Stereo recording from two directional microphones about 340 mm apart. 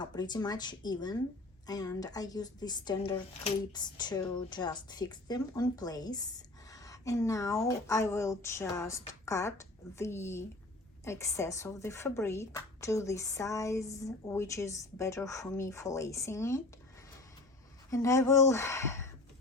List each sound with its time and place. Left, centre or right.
0.0 s speech: centre
17.9 s speech: centre